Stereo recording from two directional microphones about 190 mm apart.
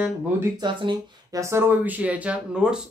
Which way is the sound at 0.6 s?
25° right (ahead or behind).